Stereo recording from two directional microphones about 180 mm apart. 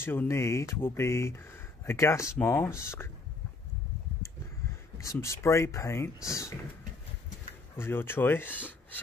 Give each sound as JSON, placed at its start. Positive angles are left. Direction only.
{"t": 0.0, "sound": "speech", "side_deg": 10}
{"t": 4.9, "sound": "speech", "side_deg": 15}
{"t": 7.7, "sound": "speech", "side_deg": 10}